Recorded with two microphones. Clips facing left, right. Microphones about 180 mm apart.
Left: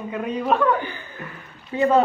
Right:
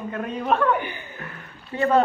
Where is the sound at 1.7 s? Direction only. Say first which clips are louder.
Left 2 dB; 15° left (ahead or behind).